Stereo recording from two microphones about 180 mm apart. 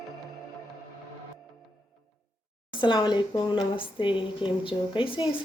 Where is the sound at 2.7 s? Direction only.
25° left (ahead or behind).